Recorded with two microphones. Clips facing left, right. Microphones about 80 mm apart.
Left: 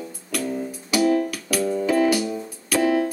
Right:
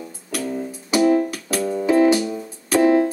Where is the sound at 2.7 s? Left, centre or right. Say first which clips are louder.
Right 5 dB; right.